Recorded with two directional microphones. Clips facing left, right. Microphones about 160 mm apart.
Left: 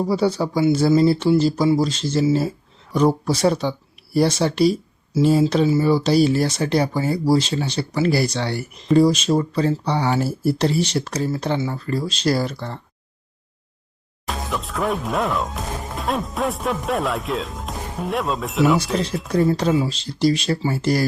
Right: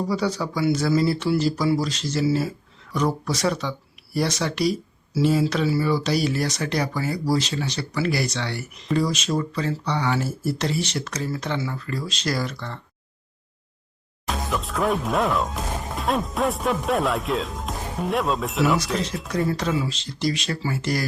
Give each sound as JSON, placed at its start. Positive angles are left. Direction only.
{"t": 0.1, "sound": "speech", "side_deg": 30}
{"t": 14.3, "sound": "speech", "side_deg": 0}
{"t": 19.3, "sound": "speech", "side_deg": 30}